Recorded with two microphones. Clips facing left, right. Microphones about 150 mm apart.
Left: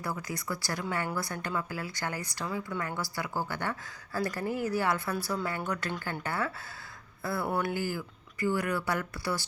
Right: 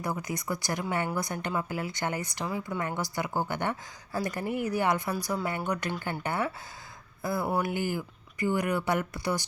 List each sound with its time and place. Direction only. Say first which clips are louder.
0.0 s a woman's voice: right 3 dB; 20° right (ahead or behind)